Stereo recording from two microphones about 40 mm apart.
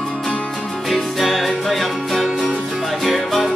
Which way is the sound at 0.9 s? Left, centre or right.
Centre.